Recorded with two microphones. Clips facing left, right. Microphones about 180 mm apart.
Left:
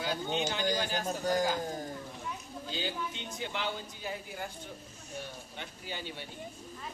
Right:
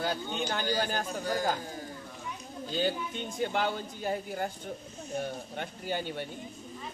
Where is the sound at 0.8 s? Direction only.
45° right (ahead or behind).